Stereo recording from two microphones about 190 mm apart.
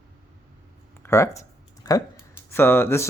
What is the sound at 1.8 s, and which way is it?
Speech, 20° left (ahead or behind).